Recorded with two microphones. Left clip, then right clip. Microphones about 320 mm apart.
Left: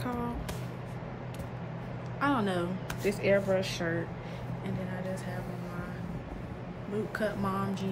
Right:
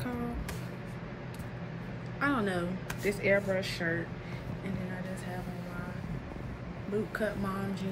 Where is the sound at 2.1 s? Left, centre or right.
Centre.